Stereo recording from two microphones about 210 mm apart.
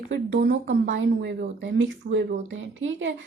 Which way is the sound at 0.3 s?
40° right (ahead or behind).